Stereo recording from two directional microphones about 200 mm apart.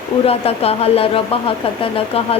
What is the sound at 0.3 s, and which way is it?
Speech, 30° left (ahead or behind).